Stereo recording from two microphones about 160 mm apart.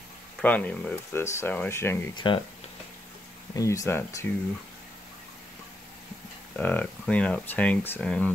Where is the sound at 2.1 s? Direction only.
30° left (ahead or behind).